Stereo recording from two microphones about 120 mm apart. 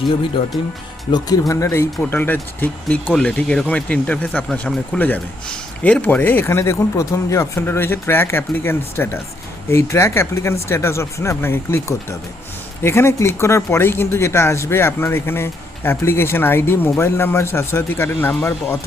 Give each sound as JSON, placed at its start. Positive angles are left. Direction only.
{"t": 0.4, "sound": "speech", "side_deg": 55}
{"t": 1.1, "sound": "a man's voice", "side_deg": 30}